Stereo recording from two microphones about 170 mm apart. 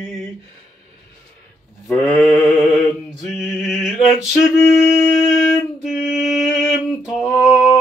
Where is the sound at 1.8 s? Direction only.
5° left (ahead or behind).